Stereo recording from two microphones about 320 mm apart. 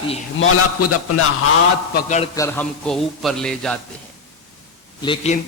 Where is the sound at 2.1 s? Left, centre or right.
Centre.